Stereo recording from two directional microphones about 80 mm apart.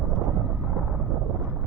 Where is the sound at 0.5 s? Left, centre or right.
Centre.